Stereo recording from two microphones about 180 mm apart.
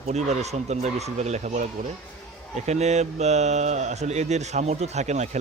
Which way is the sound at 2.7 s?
40° right (ahead or behind).